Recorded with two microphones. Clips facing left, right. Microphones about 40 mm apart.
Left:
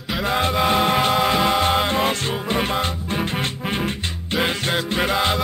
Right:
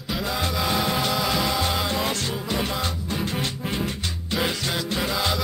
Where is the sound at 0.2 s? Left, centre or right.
Left.